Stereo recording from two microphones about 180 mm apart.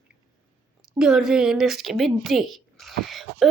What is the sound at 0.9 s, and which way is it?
A woman's voice, 5° right (ahead or behind).